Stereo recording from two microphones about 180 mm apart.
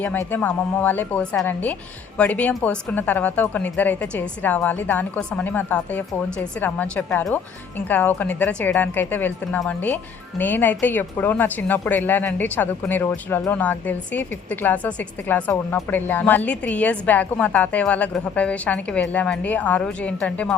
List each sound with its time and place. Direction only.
0.0 s speech: 10° left (ahead or behind)